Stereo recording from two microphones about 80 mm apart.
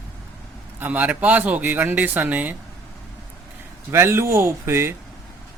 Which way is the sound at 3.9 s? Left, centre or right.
Right.